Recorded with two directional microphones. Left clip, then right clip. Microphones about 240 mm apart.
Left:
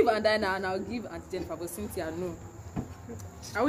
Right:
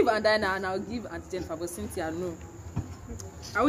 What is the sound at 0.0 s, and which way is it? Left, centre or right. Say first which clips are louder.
Speech: right 1 dB; centre.